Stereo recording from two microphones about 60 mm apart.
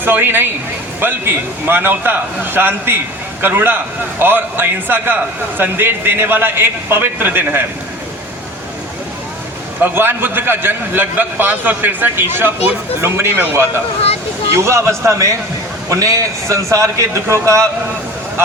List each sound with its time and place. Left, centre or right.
0.0 s a man's voice: right
9.8 s a man's voice: right
13.3 s a man's voice: right
14.5 s a man's voice: right
15.9 s a man's voice: right